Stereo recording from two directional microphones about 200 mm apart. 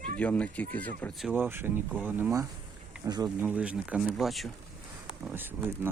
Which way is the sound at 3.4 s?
10° right (ahead or behind).